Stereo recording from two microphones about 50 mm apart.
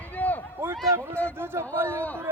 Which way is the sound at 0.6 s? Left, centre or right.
Right.